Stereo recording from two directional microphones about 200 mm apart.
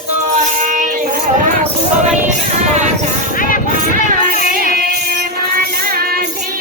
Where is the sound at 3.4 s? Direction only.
45° left (ahead or behind).